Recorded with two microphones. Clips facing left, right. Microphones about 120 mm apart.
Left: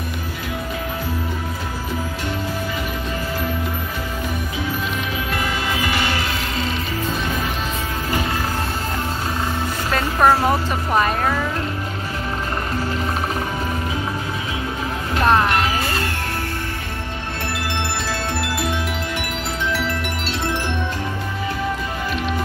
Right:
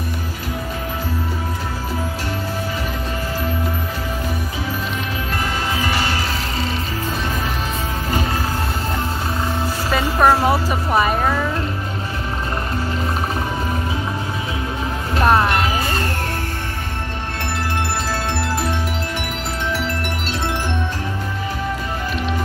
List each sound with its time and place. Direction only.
5.9 s music: 40° right (ahead or behind)
9.8 s a sound: 5° right (ahead or behind)
15.2 s music: 10° right (ahead or behind)
15.5 s music: 40° right (ahead or behind)